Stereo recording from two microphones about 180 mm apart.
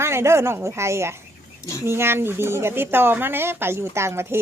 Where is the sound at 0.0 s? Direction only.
15° right (ahead or behind).